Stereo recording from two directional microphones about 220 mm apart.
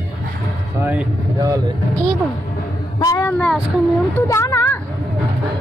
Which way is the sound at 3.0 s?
15° left (ahead or behind).